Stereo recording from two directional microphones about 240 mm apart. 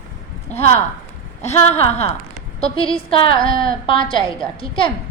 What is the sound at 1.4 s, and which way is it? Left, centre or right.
Speech, left.